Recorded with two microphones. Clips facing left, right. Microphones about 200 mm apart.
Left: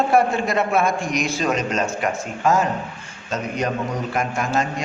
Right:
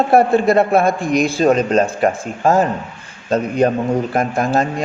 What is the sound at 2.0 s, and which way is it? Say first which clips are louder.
Speech: right 7 dB; 50° right (ahead or behind).